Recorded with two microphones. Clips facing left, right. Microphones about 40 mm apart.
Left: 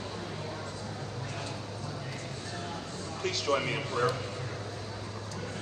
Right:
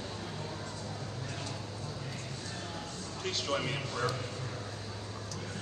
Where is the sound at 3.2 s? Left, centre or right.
Left.